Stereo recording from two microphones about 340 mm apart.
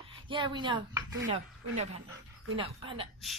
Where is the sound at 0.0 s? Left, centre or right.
Centre.